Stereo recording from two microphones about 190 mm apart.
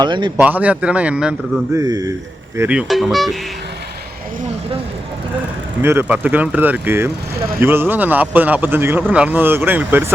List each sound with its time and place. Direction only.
0.0 s a man's voice: 25° right (ahead or behind)
0.3 s speech: 10° right (ahead or behind)
1.7 s a man's voice: 20° right (ahead or behind)
2.6 s speech: 5° right (ahead or behind)
5.8 s speech: 10° right (ahead or behind)